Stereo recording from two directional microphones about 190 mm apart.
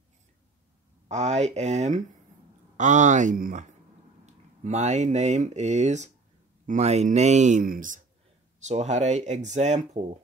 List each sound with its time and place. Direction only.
1.0 s speech: 35° right (ahead or behind)